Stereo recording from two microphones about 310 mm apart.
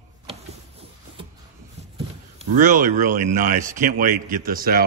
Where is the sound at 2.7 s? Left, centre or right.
Right.